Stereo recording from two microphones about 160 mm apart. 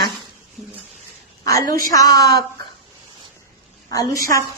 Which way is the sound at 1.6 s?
60° right (ahead or behind).